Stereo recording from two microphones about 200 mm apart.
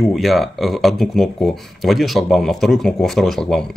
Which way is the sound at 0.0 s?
Centre (ahead or behind).